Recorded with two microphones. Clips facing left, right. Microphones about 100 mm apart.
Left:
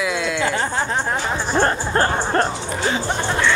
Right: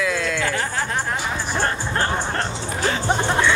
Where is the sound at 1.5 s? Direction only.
40° left (ahead or behind).